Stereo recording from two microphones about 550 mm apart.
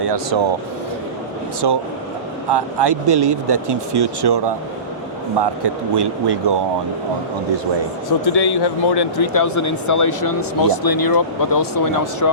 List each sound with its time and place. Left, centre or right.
0.0 s speech: right
1.6 s speech: right
8.2 s speech: left
9.3 s speech: left